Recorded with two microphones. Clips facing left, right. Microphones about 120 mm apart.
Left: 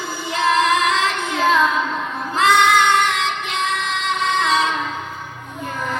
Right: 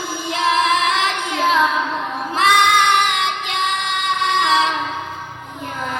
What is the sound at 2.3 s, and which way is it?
Child singing, 15° right (ahead or behind).